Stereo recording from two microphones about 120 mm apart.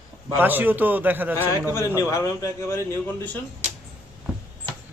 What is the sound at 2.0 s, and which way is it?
Speech, 30° left (ahead or behind).